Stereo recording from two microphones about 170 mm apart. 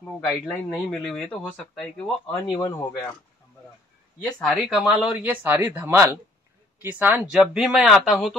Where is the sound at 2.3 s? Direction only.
15° left (ahead or behind).